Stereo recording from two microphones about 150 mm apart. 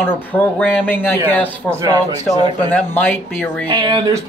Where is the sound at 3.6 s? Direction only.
30° right (ahead or behind).